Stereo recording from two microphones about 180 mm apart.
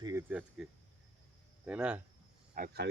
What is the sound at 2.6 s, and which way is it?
Speech, 65° right (ahead or behind).